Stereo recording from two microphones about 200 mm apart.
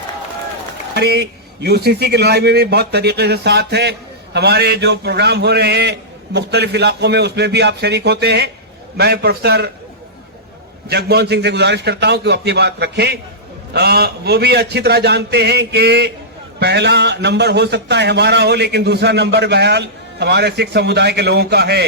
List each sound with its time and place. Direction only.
0.9 s a man's voice: 55° right (ahead or behind)
10.8 s a man's voice: 55° right (ahead or behind)